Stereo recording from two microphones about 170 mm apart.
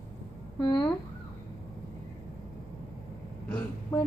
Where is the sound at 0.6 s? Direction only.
25° left (ahead or behind).